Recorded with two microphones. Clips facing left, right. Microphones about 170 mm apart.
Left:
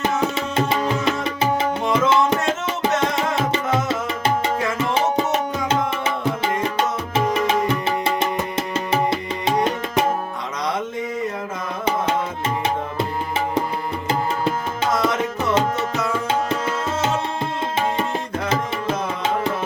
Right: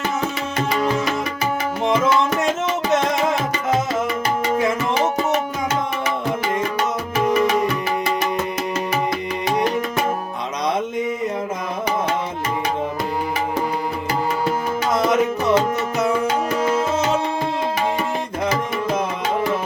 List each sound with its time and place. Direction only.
1.9 s music: 25° left (ahead or behind)
7.4 s music: 25° left (ahead or behind)
14.9 s tabla: 20° right (ahead or behind)